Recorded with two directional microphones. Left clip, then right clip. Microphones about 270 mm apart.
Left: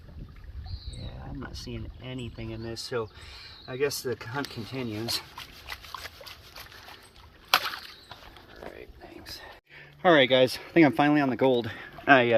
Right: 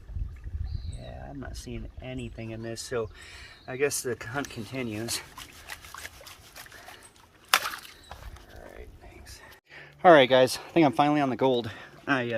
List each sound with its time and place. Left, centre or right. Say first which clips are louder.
1.4 s speech: left 1 dB; centre
7.6 s a sound: left 1 dB; centre
9.7 s speech: right 4 dB; centre